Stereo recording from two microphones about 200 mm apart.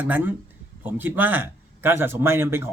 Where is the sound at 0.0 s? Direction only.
10° right (ahead or behind).